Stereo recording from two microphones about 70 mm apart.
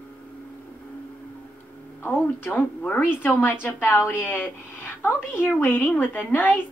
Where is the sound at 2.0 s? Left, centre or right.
Left.